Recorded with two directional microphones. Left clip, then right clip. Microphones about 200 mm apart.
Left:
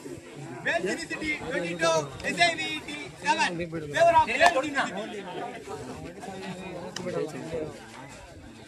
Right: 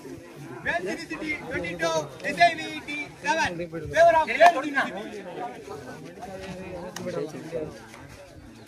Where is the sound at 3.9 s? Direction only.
20° right (ahead or behind).